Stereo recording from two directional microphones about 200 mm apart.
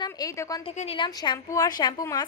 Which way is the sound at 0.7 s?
30° left (ahead or behind).